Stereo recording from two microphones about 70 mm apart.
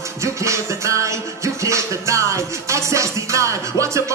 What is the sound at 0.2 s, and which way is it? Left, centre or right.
Music, right.